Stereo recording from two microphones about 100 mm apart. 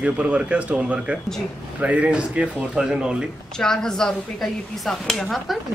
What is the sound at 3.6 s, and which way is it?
Speech, 5° left (ahead or behind).